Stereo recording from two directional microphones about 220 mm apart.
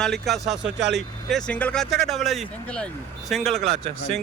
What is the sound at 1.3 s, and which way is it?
Speech, 5° left (ahead or behind).